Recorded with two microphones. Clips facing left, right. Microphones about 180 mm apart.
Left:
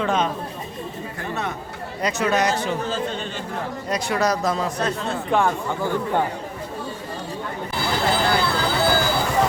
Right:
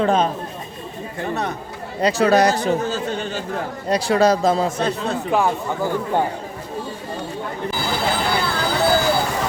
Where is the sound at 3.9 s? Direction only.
30° right (ahead or behind).